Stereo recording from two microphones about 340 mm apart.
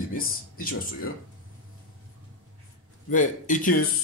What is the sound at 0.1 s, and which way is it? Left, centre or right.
Speech, left.